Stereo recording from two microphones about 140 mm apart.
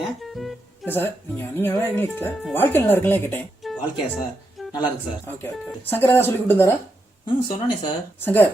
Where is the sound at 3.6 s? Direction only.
Centre (ahead or behind).